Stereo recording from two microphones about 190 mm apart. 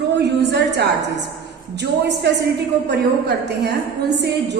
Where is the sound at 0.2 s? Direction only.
60° right (ahead or behind).